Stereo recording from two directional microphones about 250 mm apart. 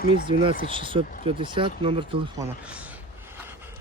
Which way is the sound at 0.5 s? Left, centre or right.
Left.